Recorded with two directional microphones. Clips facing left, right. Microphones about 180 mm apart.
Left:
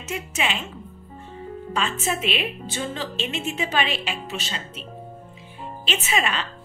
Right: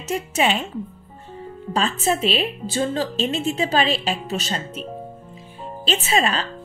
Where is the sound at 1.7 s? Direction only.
35° right (ahead or behind).